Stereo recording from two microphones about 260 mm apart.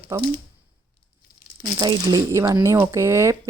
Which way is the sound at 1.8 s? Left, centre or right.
Centre.